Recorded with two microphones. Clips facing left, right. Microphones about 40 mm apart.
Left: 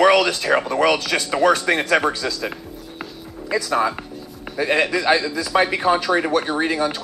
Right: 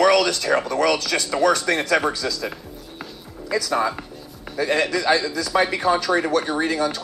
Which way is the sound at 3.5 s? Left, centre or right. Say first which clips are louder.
Left 2 dB; centre.